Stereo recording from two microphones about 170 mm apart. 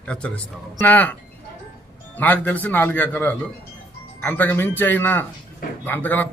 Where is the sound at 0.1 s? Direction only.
5° left (ahead or behind).